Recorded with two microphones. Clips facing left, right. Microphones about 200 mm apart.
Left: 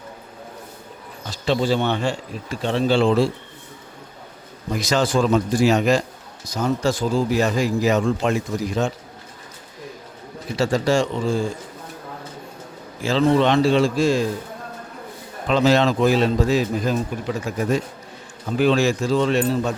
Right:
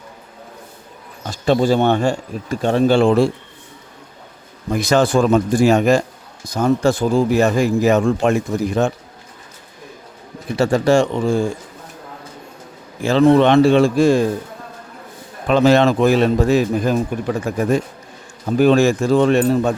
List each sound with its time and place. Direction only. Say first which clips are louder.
1.3 s speech: right 5 dB; 45° right (ahead or behind)
4.7 s a man's voice: right 5 dB; 55° right (ahead or behind)
10.6 s a man's voice: right 5 dB; 55° right (ahead or behind)
13.0 s a man's voice: right 5 dB; 60° right (ahead or behind)
15.4 s a man's voice: right 4 dB; 55° right (ahead or behind)